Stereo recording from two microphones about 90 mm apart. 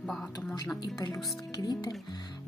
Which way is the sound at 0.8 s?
40° left (ahead or behind).